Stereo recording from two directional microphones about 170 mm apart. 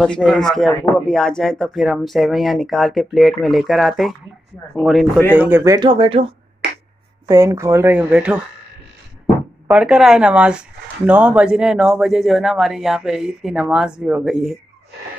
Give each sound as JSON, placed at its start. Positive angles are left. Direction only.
{"t": 0.0, "sound": "speech", "side_deg": 5}
{"t": 5.3, "sound": "speech", "side_deg": -10}
{"t": 7.2, "sound": "speech", "side_deg": -20}
{"t": 9.7, "sound": "speech", "side_deg": -5}